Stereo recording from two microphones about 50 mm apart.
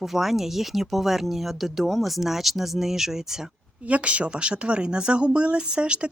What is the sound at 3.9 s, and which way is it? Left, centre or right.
Speech, right.